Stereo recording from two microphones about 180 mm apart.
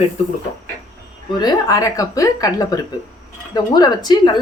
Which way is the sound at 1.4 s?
20° left (ahead or behind).